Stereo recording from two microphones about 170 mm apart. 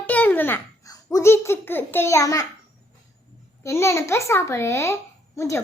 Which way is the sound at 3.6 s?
15° left (ahead or behind).